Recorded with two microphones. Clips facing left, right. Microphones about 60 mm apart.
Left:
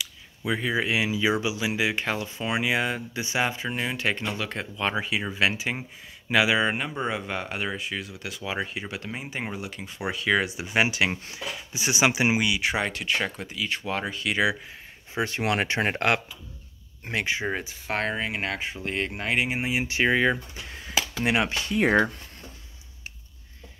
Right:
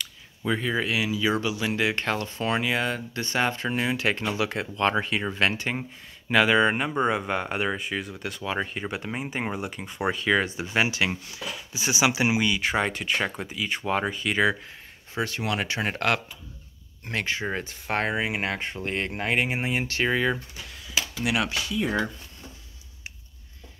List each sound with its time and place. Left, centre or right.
0.0 s speech: centre
10.5 s speech: centre
12.4 s speech: centre
15.1 s speech: left; by 19.8 s centre
19.8 s speech: centre
21.2 s speech: left
21.6 s speech: left